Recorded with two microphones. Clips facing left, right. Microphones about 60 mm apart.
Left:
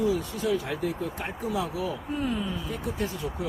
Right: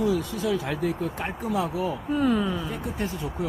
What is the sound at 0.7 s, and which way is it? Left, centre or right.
Speech, right.